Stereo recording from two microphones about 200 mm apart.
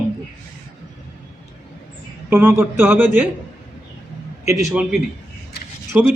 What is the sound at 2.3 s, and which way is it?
Speech, 10° right (ahead or behind).